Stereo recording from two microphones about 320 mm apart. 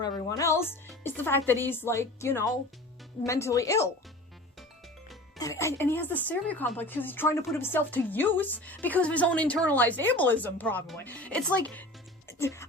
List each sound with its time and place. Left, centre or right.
0.0 s speech: centre
5.4 s a woman's voice: centre